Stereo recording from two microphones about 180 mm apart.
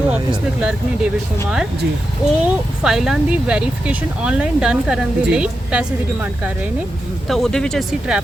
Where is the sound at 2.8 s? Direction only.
Centre (ahead or behind).